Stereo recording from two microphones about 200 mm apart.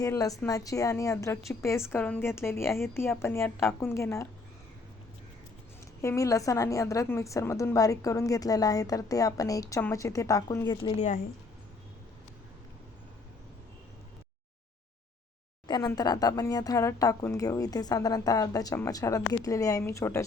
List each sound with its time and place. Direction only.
0.0 s a woman's voice: 15° left (ahead or behind)
6.0 s a woman's voice: 15° left (ahead or behind)
15.6 s a woman's voice: 20° left (ahead or behind)